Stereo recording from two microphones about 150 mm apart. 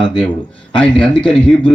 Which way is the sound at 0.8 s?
5° left (ahead or behind).